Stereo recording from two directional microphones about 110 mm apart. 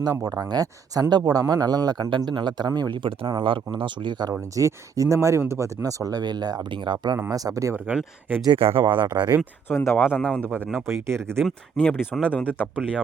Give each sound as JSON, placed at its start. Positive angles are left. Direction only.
{"t": 0.3, "sound": "speech", "side_deg": -40}
{"t": 7.9, "sound": "speech", "side_deg": -15}
{"t": 8.5, "sound": "speech", "side_deg": -55}
{"t": 9.4, "sound": "speech", "side_deg": 20}
{"t": 10.8, "sound": "speech", "side_deg": -25}
{"t": 11.8, "sound": "speech", "side_deg": 15}